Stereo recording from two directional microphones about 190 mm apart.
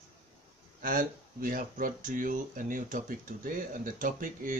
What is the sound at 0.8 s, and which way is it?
Speech, 45° right (ahead or behind).